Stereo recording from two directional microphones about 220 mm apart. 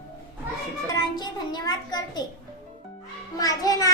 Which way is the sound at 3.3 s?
15° left (ahead or behind).